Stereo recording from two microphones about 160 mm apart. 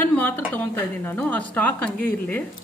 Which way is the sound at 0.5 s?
10° left (ahead or behind).